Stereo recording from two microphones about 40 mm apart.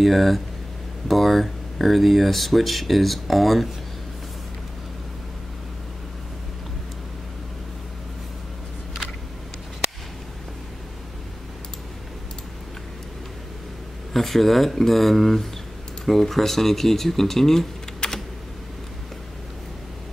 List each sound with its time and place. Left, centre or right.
0.0 s speech: centre
14.1 s speech: centre
18.0 s computer keyboard: left